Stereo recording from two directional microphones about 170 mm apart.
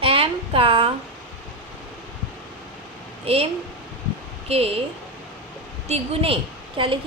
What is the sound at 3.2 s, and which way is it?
A woman's voice, 35° right (ahead or behind).